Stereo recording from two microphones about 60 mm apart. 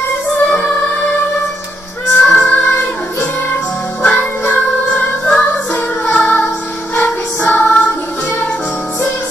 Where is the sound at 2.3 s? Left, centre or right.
Left.